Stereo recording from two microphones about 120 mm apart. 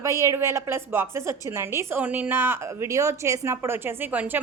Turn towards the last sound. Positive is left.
turn(degrees=-15)  # may be behind; listen again after turning